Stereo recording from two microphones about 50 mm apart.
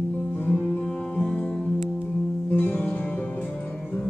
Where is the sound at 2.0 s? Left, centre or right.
Left.